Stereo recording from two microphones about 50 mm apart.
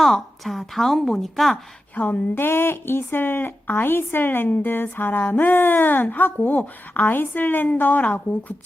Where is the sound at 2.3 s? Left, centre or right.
Left.